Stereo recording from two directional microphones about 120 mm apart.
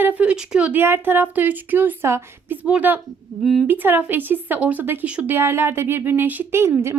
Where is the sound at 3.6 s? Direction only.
15° right (ahead or behind).